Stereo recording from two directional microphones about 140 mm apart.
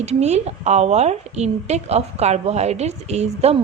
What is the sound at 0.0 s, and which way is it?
A woman's voice, 50° right (ahead or behind).